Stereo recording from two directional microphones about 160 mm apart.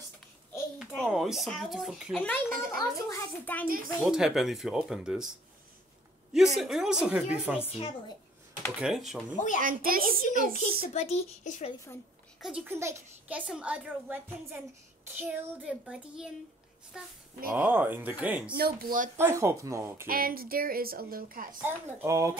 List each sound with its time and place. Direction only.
0.7 s a child's voice: centre (ahead or behind)
3.6 s a woman's voice: 60° right (ahead or behind)
4.0 s speech: centre (ahead or behind)
6.3 s speech: centre (ahead or behind)
7.6 s speech: 40° left (ahead or behind)
8.6 s speech: 5° right (ahead or behind)
9.6 s a woman's voice: 60° right (ahead or behind)
10.9 s speech: 40° left (ahead or behind)
12.4 s a child's voice: centre (ahead or behind)
12.6 s a child's voice: 15° right (ahead or behind)
18.5 s a woman's voice: 70° right (ahead or behind)
19.1 s a child's voice: 15° right (ahead or behind)
20.1 s a woman's voice: 65° right (ahead or behind)
21.6 s speech: 20° right (ahead or behind)